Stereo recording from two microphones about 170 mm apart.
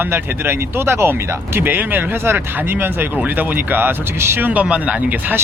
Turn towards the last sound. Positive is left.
turn(degrees=-10)  # may be behind; listen again after turning